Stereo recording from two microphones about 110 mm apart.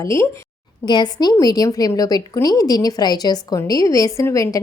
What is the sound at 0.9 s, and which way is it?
A woman's voice, 40° left (ahead or behind).